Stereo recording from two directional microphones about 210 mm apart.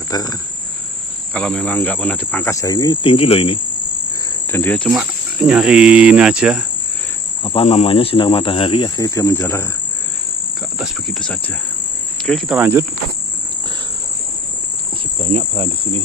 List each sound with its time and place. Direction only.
0.1 s cricket: 20° left (ahead or behind)
1.3 s speech: 5° left (ahead or behind); by 3.6 s 25° left (ahead or behind)
4.5 s speech: 10° left (ahead or behind)
5.4 s cricket: 5° right (ahead or behind)
7.4 s speech: 30° left (ahead or behind); by 9.7 s 10° left (ahead or behind)
10.8 s cricket: centre (ahead or behind)
15.2 s cricket: 25° right (ahead or behind)